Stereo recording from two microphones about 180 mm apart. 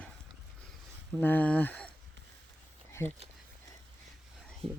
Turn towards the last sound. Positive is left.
turn(degrees=-30)  # may be behind; listen again after turning